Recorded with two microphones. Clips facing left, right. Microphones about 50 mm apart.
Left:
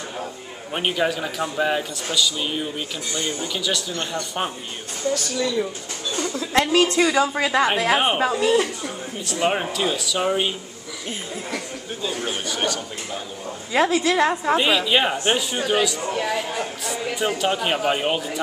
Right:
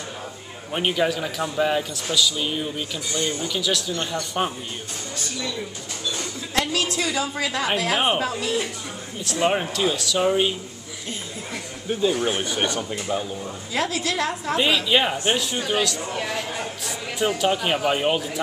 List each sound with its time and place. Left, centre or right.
0.7 s speech: centre
6.5 s a woman's voice: left
9.2 s speech: centre
12.0 s speech: centre
13.7 s a woman's voice: centre
14.6 s speech: centre